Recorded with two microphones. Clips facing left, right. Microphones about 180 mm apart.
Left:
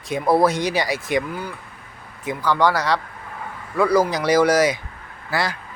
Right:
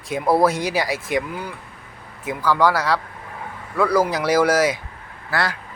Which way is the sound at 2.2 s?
5° right (ahead or behind).